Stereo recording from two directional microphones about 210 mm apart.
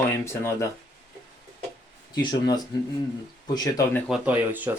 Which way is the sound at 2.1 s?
20° left (ahead or behind).